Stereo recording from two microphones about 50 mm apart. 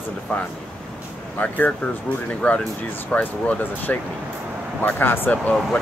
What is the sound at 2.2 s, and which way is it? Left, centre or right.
Speech, left.